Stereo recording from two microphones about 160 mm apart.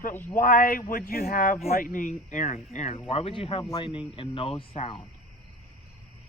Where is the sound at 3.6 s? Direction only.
25° left (ahead or behind).